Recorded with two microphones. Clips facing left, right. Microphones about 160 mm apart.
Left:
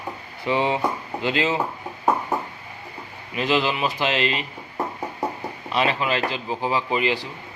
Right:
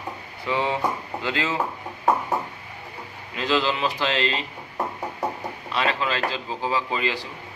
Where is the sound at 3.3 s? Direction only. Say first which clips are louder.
Left 1 dB; 15° left (ahead or behind).